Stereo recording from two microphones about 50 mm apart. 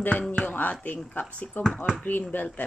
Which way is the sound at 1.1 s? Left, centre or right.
Left.